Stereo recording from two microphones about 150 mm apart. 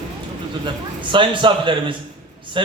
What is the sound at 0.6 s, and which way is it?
A man's voice, 35° right (ahead or behind).